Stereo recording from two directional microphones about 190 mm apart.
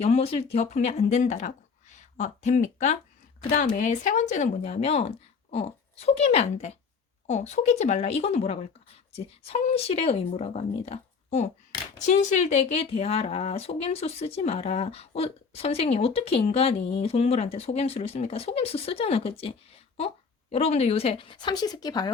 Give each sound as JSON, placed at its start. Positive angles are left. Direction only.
{"t": 0.0, "sound": "speech", "side_deg": 30}